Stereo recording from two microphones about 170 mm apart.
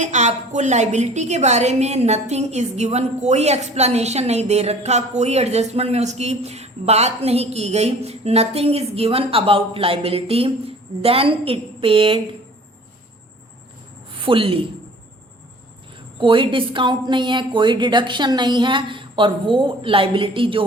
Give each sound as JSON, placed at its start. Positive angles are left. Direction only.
{"t": 0.0, "sound": "a woman's voice", "side_deg": -45}
{"t": 14.3, "sound": "a woman's voice", "side_deg": -30}
{"t": 16.1, "sound": "a woman's voice", "side_deg": -30}